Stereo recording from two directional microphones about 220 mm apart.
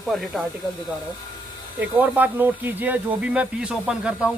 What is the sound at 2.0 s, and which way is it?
Speech, 10° right (ahead or behind).